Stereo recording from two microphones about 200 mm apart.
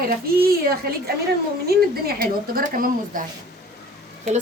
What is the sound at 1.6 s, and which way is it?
A woman's voice, 50° right (ahead or behind).